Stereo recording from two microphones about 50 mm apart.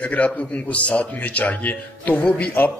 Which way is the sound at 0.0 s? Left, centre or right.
Left.